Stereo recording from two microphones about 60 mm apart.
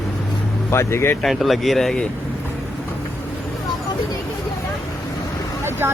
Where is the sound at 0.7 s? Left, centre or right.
Left.